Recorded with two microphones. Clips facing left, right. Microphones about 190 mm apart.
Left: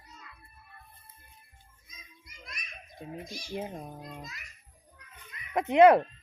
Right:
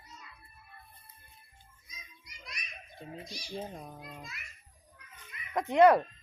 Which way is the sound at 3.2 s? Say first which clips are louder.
Left 3 dB; 50° left (ahead or behind).